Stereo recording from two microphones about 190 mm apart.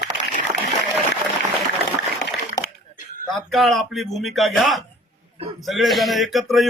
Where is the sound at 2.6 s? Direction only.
20° left (ahead or behind).